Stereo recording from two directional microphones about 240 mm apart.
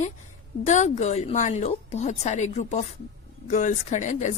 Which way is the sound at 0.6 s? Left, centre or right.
Left.